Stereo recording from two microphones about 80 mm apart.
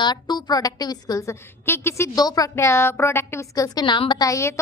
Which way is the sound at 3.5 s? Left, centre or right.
Left.